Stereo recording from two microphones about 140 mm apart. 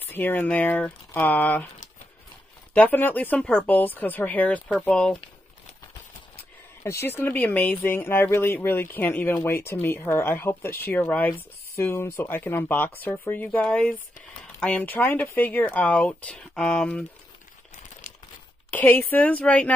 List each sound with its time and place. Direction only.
0.1 s speech: 15° left (ahead or behind)
2.7 s speech: 10° left (ahead or behind)
6.8 s speech: 20° left (ahead or behind)
18.7 s speech: 15° left (ahead or behind)